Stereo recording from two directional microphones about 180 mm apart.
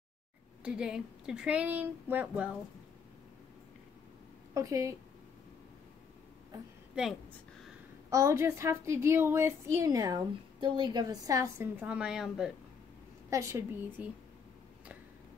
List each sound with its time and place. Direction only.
0.7 s speech: 5° right (ahead or behind)
4.6 s speech: 20° right (ahead or behind)
8.1 s speech: 15° right (ahead or behind)
13.3 s speech: 15° right (ahead or behind)